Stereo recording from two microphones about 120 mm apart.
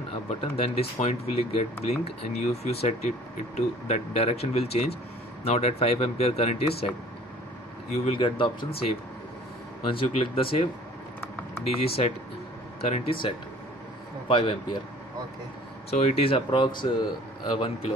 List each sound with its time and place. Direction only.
0.3 s speech: 55° left (ahead or behind)
3.5 s speech: 70° left (ahead or behind)
7.9 s speech: 55° left (ahead or behind)
9.8 s speech: 50° left (ahead or behind)
14.2 s speech: 45° left (ahead or behind)
15.9 s speech: 60° left (ahead or behind)